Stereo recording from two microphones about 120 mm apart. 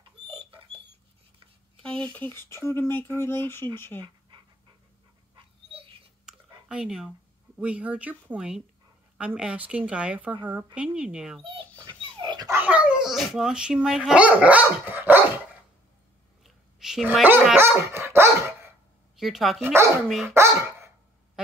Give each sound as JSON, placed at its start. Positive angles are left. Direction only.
{"t": 0.3, "sound": "rodents", "side_deg": -50}
{"t": 1.8, "sound": "a sound", "side_deg": 5}
{"t": 2.1, "sound": "speech", "side_deg": 20}
{"t": 5.3, "sound": "dog", "side_deg": -50}
{"t": 6.2, "sound": "a woman's voice", "side_deg": -5}
{"t": 11.8, "sound": "dog", "side_deg": -40}
{"t": 12.4, "sound": "speech", "side_deg": -15}
{"t": 16.4, "sound": "dog", "side_deg": -5}
{"t": 17.6, "sound": "dog", "side_deg": -20}
{"t": 19.1, "sound": "speech", "side_deg": 0}
{"t": 19.6, "sound": "speech", "side_deg": -20}
{"t": 20.2, "sound": "dog", "side_deg": -25}